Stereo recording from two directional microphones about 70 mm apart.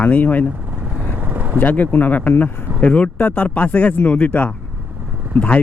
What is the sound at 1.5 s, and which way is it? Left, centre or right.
Speech, left.